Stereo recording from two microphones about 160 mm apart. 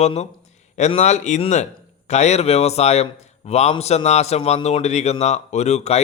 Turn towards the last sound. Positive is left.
turn(degrees=45)  # may be behind; listen again after turning